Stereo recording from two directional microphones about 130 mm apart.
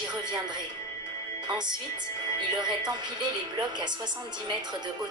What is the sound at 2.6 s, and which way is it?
Music, 35° right (ahead or behind).